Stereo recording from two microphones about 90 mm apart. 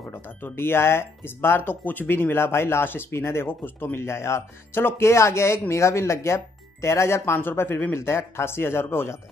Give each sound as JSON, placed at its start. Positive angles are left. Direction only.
{"t": 0.1, "sound": "speech", "side_deg": 25}